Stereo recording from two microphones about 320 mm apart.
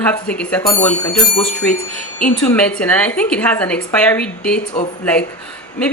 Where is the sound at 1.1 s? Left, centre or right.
Left.